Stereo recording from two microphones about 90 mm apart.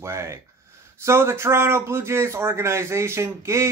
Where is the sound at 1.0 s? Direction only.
30° right (ahead or behind).